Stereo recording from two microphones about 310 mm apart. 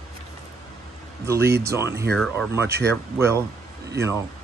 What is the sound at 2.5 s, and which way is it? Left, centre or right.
Speech, centre.